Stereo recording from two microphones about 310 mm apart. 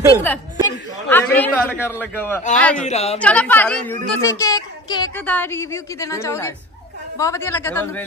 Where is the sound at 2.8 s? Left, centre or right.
Left.